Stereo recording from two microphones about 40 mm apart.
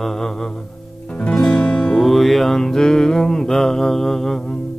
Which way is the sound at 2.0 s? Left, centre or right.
Centre.